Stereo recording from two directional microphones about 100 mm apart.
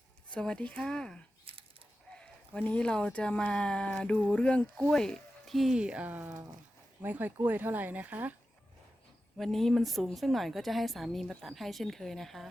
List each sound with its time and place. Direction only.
0.3 s speech: 10° left (ahead or behind)
1.5 s a sound: 65° right (ahead or behind)
2.1 s speech: 10° left (ahead or behind); by 8.4 s 15° right (ahead or behind)
9.4 s a woman's voice: centre (ahead or behind)